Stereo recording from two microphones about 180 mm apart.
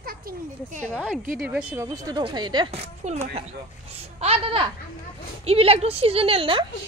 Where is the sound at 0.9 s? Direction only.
5° right (ahead or behind).